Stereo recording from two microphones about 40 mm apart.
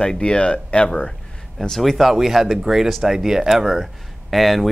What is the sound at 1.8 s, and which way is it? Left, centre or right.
A man's voice, centre.